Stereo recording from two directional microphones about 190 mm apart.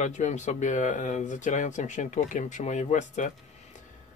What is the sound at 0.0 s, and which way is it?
Speech, 40° left (ahead or behind).